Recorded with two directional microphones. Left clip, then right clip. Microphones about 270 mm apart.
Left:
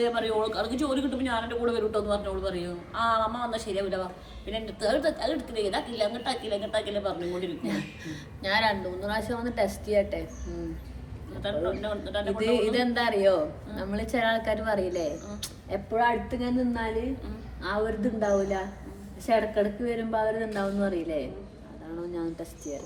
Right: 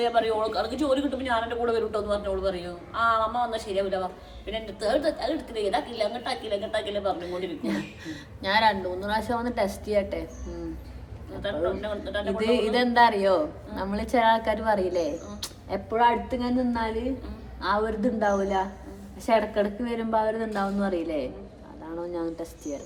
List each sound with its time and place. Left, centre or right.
0.0 s a man's voice: centre
11.4 s a man's voice: centre
12.3 s a man's voice: centre